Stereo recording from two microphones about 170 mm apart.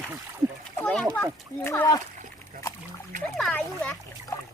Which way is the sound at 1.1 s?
15° left (ahead or behind).